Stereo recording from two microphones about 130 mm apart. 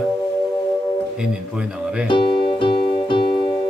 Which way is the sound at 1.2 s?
5° right (ahead or behind).